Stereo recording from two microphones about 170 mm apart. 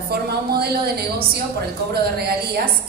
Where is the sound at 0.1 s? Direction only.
65° right (ahead or behind).